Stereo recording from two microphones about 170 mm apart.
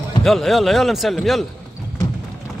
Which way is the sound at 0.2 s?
Centre (ahead or behind).